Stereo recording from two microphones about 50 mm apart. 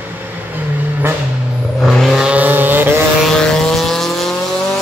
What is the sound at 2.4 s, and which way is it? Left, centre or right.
Vehicle, right.